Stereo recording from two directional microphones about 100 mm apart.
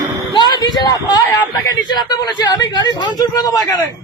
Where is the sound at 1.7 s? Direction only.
40° left (ahead or behind).